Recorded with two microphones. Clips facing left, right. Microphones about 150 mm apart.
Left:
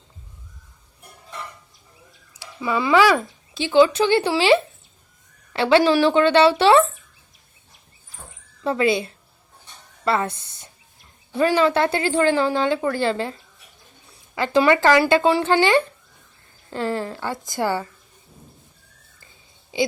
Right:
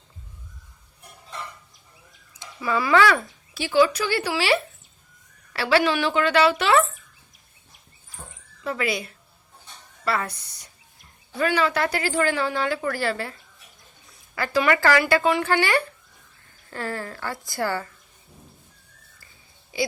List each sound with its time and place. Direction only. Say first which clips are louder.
2.6 s a woman's voice: left 2 dB; 20° left (ahead or behind)
8.6 s a woman's voice: left 7 dB; 25° left (ahead or behind)